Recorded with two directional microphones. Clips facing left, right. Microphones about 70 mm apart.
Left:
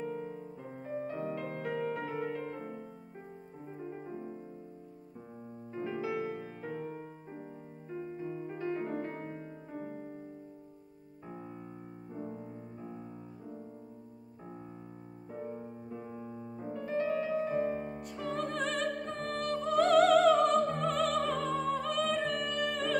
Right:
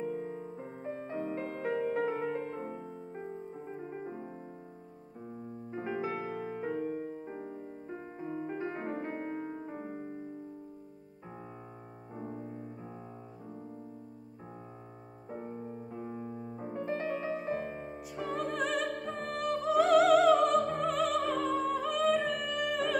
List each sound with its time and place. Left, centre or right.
0.8 s music: right
5.7 s music: right
9.7 s music: right
15.9 s music: right
17.4 s music: centre